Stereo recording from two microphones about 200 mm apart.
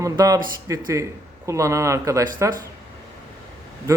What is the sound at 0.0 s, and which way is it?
Speech, 15° right (ahead or behind).